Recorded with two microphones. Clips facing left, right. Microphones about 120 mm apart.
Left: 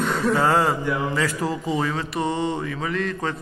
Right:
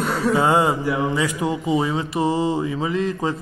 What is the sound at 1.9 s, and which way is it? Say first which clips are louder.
Mantra: right 4 dB; 25° right (ahead or behind).